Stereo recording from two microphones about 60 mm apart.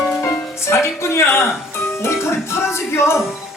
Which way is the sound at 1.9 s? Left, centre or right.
Left.